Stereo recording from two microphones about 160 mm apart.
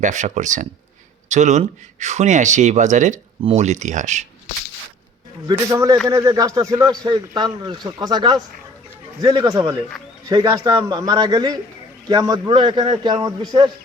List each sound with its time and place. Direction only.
0.0 s speech: 50° right (ahead or behind)
5.5 s speech: 20° right (ahead or behind)